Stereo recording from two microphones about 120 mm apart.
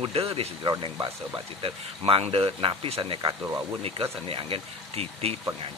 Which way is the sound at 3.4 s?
25° right (ahead or behind).